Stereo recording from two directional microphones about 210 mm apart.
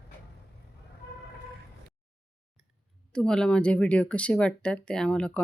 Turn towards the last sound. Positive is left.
turn(degrees=5)  # may be behind; listen again after turning